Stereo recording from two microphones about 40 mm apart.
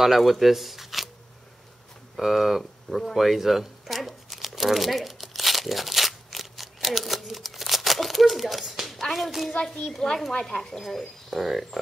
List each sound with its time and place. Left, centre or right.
0.0 s speech: centre
2.1 s speech: centre
3.2 s crumpling: centre
9.1 s speech: centre
9.6 s a child's voice: centre
10.8 s speech: centre